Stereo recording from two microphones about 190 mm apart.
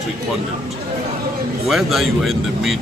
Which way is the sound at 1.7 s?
Centre (ahead or behind).